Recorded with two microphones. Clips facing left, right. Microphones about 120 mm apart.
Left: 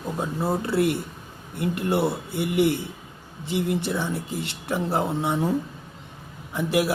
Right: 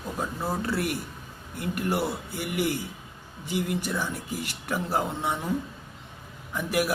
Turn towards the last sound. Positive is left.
turn(degrees=25)  # may be behind; listen again after turning